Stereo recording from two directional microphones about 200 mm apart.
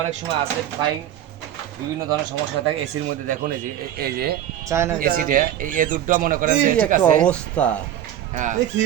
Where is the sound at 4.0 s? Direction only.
50° right (ahead or behind).